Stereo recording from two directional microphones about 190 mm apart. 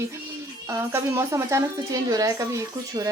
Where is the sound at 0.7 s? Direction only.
15° right (ahead or behind).